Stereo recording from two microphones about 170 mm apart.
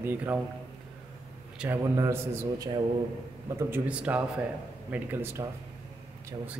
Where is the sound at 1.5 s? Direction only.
10° right (ahead or behind).